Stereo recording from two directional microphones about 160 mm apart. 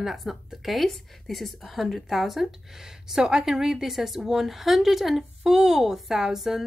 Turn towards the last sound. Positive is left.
turn(degrees=0)  # may be behind; listen again after turning